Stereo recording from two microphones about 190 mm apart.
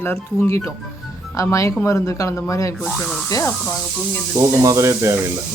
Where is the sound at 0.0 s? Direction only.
10° left (ahead or behind).